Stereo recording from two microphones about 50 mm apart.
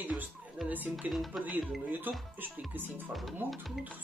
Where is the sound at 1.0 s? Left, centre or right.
Centre.